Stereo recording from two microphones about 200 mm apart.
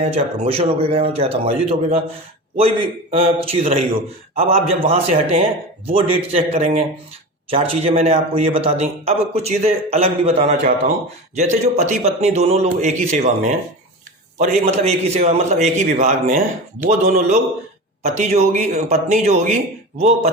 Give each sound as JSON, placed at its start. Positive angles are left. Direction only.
{"t": 0.0, "sound": "speech", "side_deg": -30}
{"t": 3.1, "sound": "a man's voice", "side_deg": -30}